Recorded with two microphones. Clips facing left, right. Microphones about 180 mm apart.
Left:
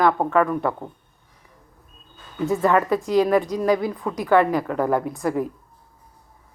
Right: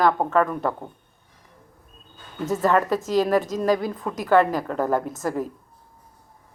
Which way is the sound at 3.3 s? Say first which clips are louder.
Left 2 dB; 45° right (ahead or behind).